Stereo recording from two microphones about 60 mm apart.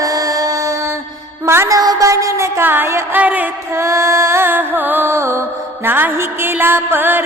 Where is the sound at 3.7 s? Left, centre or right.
Right.